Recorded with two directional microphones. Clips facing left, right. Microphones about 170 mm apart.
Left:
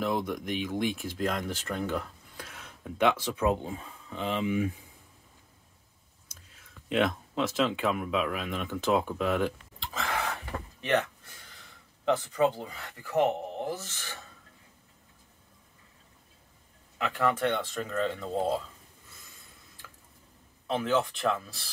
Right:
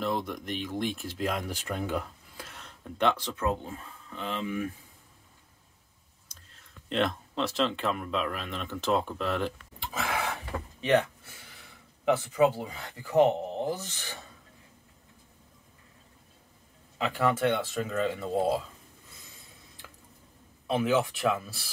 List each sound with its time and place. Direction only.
0.0 s speech: centre (ahead or behind)
2.4 s speech: 5° left (ahead or behind)
6.5 s speech: 5° left (ahead or behind)
9.9 s a sound: 10° right (ahead or behind)
12.0 s speech: 10° right (ahead or behind)
17.0 s speech: 10° right (ahead or behind)
20.6 s speech: 10° right (ahead or behind)